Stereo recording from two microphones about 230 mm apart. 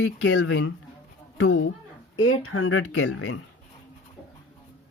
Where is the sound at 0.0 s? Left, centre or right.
Left.